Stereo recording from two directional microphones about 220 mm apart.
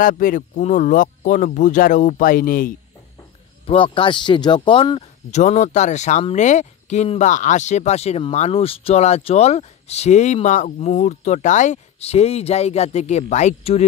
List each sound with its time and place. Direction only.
0.0 s speech: 40° left (ahead or behind)
3.6 s speech: 25° left (ahead or behind)